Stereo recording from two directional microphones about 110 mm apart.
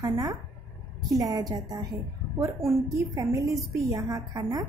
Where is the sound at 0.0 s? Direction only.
35° right (ahead or behind).